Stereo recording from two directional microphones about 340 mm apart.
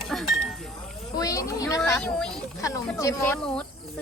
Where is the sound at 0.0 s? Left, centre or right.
Centre.